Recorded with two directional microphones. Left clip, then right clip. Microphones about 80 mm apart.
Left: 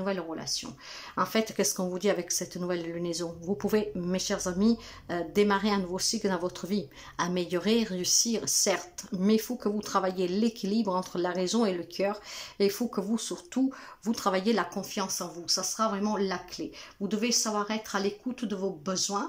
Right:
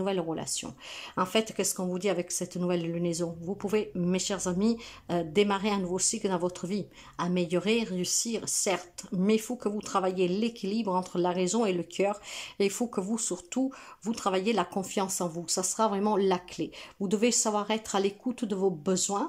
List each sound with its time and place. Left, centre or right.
0.0 s speech: right
1.1 s speech: right
14.7 s speech: right
18.3 s speech: right